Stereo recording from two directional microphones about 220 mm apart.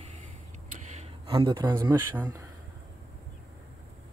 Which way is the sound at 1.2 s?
20° right (ahead or behind).